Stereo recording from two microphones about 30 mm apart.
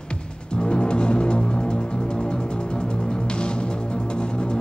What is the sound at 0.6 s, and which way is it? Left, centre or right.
Music, left.